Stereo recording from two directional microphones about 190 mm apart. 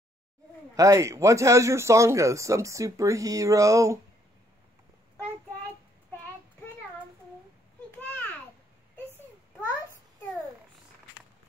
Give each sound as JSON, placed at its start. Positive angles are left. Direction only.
{"t": 0.7, "sound": "a man's voice", "side_deg": -15}